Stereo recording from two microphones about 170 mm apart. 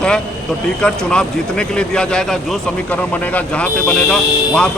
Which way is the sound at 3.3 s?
5° left (ahead or behind).